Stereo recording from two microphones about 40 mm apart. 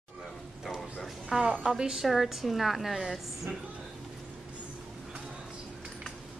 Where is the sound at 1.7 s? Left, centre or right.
Centre.